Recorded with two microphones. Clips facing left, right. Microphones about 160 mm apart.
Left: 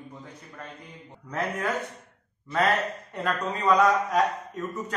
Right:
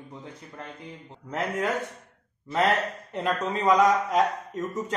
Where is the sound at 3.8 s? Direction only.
20° right (ahead or behind).